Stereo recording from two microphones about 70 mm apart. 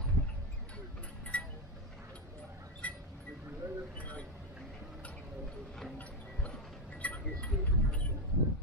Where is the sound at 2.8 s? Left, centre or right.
Left.